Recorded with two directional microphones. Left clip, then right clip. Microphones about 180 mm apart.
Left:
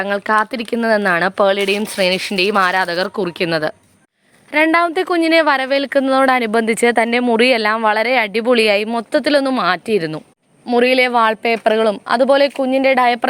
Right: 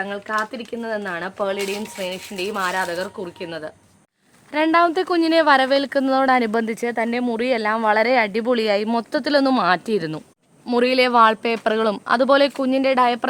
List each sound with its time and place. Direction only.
0.0 s speech: 55° left (ahead or behind)
4.5 s speech: 15° left (ahead or behind)